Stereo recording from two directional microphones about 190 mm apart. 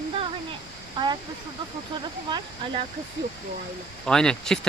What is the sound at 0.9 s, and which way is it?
Speech, 25° right (ahead or behind).